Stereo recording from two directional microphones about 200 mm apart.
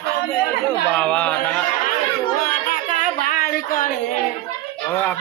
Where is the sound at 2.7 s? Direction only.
40° left (ahead or behind).